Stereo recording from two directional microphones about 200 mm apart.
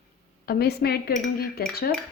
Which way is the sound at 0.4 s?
50° left (ahead or behind).